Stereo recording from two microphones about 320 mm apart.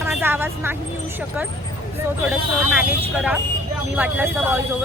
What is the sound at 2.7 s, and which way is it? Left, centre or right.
Speech, centre.